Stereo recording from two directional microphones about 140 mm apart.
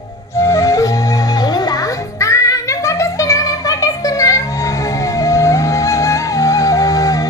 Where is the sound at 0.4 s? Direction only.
20° left (ahead or behind).